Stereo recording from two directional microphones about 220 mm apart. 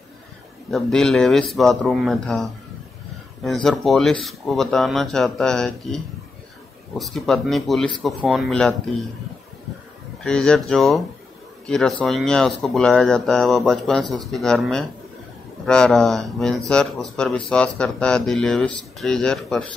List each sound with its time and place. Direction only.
0.7 s speech: centre (ahead or behind)
10.2 s speech: 5° left (ahead or behind)